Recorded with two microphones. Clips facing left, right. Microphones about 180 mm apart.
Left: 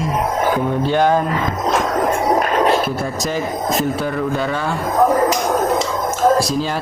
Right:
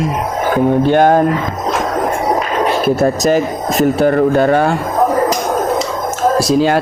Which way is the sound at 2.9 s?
75° right (ahead or behind).